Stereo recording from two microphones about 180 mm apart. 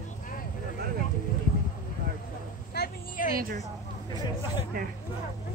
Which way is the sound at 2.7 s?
60° left (ahead or behind).